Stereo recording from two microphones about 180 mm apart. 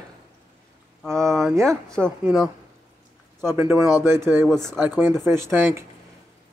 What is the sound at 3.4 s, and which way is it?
Speech, 15° right (ahead or behind).